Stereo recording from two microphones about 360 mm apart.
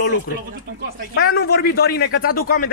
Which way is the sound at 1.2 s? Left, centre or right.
Left.